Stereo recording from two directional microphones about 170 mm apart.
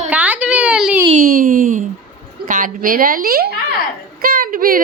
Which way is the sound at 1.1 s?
55° right (ahead or behind).